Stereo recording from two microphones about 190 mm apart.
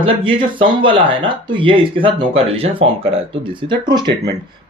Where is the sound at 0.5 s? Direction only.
25° right (ahead or behind).